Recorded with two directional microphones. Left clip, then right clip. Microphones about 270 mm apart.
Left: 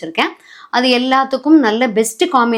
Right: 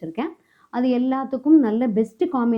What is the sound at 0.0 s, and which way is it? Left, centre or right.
A woman's voice, centre.